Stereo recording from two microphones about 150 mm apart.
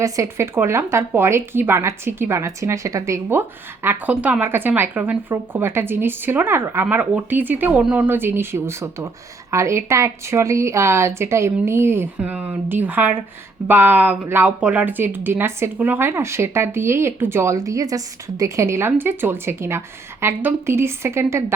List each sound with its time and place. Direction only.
0.0 s a woman's voice: 20° right (ahead or behind)